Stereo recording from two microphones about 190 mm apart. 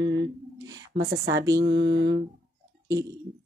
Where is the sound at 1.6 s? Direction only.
70° right (ahead or behind).